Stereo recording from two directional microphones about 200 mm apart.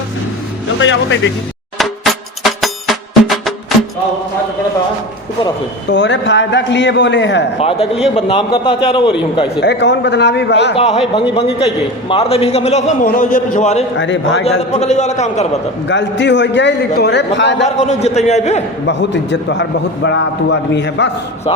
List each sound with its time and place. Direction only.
0.8 s a man's voice: 70° left (ahead or behind)
2.4 s music: centre (ahead or behind)
5.9 s a man's voice: 65° left (ahead or behind)
7.6 s a man's voice: 30° left (ahead or behind)
9.6 s a man's voice: 60° left (ahead or behind)
10.8 s a man's voice: 30° left (ahead or behind)
13.9 s a man's voice: 65° left (ahead or behind)
14.7 s a man's voice: 35° left (ahead or behind)
15.9 s a man's voice: 65° left (ahead or behind)
17.7 s a man's voice: 35° left (ahead or behind)
18.9 s a man's voice: 60° left (ahead or behind)